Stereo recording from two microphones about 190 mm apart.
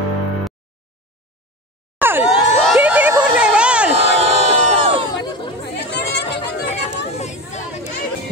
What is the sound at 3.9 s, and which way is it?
Crowd, 35° right (ahead or behind).